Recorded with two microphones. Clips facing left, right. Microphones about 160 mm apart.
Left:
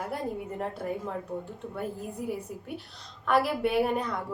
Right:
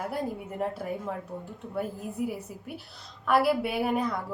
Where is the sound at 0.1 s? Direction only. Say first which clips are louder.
Even; 5° right (ahead or behind).